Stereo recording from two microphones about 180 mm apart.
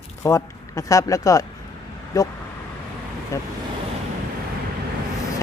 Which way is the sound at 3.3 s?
15° left (ahead or behind).